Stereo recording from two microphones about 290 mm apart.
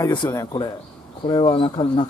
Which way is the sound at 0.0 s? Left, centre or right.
Centre.